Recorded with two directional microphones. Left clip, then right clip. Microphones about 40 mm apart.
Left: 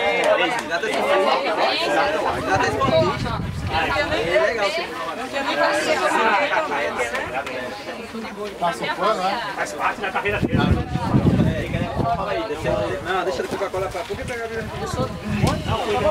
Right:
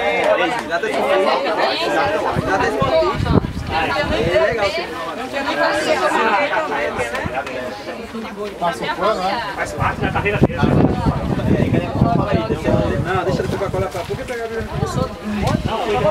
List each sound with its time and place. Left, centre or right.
0.2 s a sound: left
0.7 s speech: left
2.9 s speech: centre
8.6 s speech: centre
9.6 s speech: left
12.1 s speech: centre
15.4 s speech: left